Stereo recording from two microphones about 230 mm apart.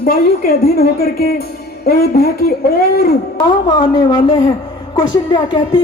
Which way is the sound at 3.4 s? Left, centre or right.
Left.